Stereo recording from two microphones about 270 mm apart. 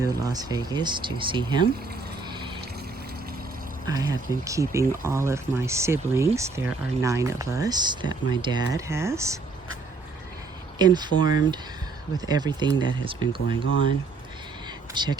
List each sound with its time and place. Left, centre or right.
0.0 s speech: centre
3.8 s speech: centre
10.8 s speech: centre
14.9 s speech: centre